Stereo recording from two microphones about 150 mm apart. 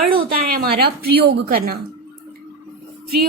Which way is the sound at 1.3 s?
90° right.